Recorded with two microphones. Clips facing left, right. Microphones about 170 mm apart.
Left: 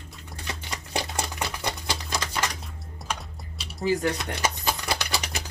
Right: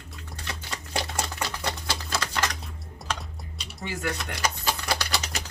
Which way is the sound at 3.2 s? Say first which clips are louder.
Even; centre (ahead or behind).